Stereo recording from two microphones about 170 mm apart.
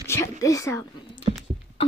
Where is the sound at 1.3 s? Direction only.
40° right (ahead or behind).